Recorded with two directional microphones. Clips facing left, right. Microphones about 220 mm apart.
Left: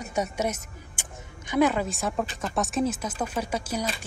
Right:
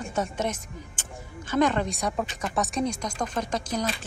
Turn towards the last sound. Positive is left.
turn(degrees=10)  # may be behind; listen again after turning